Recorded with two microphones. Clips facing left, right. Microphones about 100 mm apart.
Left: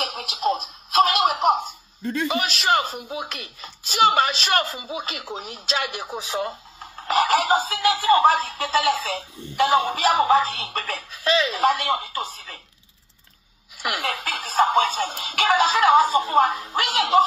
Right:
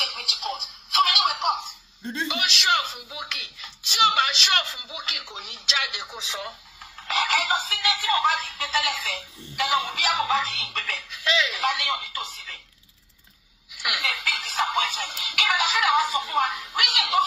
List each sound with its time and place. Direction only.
0.0 s a sound: 40° left (ahead or behind)
2.2 s speech: 40° left (ahead or behind)
13.7 s speech: 40° left (ahead or behind)